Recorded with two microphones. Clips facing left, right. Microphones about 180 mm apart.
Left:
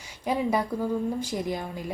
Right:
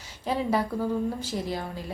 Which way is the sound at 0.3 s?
15° left (ahead or behind).